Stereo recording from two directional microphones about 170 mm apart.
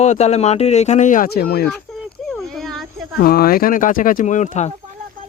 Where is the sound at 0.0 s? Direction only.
40° left (ahead or behind); by 1.6 s 70° left (ahead or behind).